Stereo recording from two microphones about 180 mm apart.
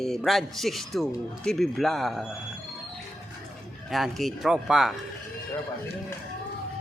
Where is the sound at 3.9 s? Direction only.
Centre (ahead or behind).